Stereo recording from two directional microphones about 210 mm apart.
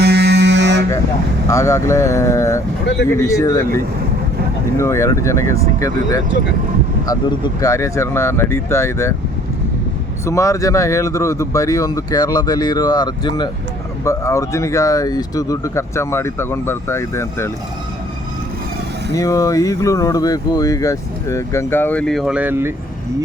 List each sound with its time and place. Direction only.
0.0 s a sound: 50° right (ahead or behind)
1.5 s speech: 15° left (ahead or behind)
4.8 s speech: 15° left (ahead or behind)
10.2 s speech: 15° left (ahead or behind)
19.1 s speech: 15° left (ahead or behind); by 22.7 s 10° right (ahead or behind)